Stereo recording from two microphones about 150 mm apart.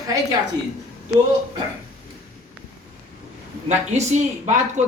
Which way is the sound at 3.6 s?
50° right (ahead or behind).